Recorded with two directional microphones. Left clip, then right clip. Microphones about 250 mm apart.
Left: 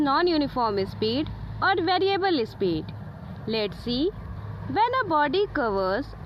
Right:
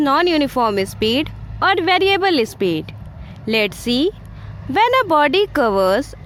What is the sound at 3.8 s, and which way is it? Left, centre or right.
Speech, right.